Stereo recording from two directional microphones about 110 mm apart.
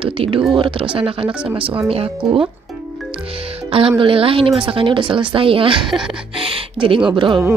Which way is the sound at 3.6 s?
55° right (ahead or behind).